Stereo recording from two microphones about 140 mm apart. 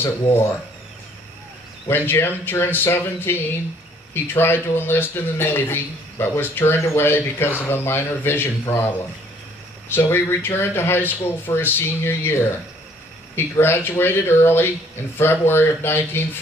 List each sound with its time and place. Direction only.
1.9 s a man's voice: 15° left (ahead or behind)